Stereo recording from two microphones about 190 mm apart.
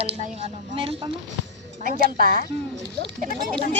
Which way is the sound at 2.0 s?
50° right (ahead or behind).